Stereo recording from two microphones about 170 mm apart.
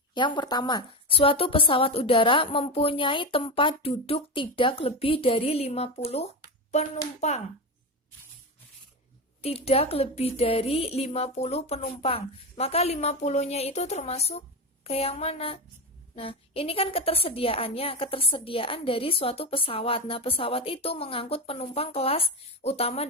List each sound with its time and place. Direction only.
0.1 s a woman's voice: 25° left (ahead or behind)
9.4 s a woman's voice: 35° left (ahead or behind)